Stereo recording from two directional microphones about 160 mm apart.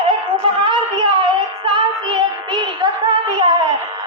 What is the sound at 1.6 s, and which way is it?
Child singing, 30° right (ahead or behind).